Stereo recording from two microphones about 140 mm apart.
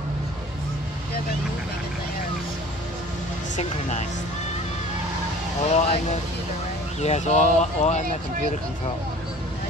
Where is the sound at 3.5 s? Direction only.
55° left (ahead or behind).